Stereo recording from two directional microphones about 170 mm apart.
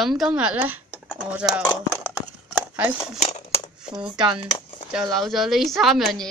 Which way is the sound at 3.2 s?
40° left (ahead or behind).